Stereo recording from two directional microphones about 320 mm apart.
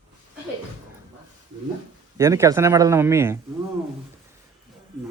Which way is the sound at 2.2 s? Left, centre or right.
Centre.